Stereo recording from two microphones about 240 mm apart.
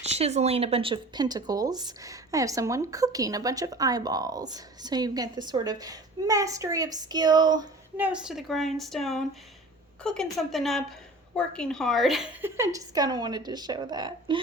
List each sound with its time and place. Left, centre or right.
0.0 s speech: right
7.9 s a woman's voice: centre